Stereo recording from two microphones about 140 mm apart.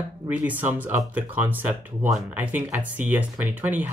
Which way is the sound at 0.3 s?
10° right (ahead or behind).